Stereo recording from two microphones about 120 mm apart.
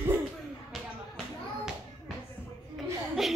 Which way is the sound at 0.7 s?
Centre (ahead or behind).